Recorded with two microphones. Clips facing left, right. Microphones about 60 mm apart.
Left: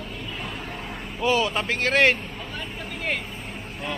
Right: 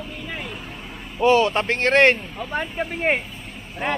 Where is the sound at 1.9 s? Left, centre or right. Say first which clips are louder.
Right 4 dB; centre.